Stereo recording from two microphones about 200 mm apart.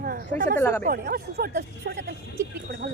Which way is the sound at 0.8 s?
50° right (ahead or behind).